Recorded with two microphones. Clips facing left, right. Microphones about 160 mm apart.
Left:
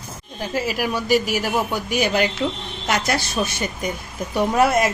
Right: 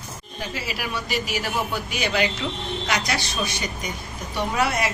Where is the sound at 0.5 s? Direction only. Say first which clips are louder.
Left 8 dB; 45° left (ahead or behind).